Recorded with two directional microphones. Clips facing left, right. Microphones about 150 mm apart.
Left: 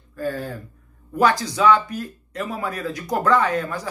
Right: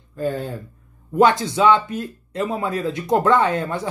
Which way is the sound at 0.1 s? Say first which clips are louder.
Right 3 dB; 20° right (ahead or behind).